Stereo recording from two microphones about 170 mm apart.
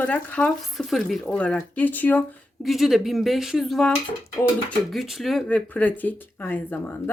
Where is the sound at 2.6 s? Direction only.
Centre (ahead or behind).